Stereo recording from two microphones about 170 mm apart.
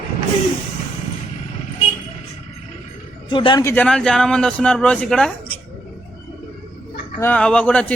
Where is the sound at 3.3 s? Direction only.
30° left (ahead or behind).